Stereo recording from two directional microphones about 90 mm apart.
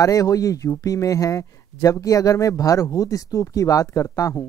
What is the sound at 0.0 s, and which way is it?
Speech, 40° left (ahead or behind).